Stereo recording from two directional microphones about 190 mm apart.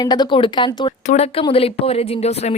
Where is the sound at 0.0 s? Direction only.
20° left (ahead or behind).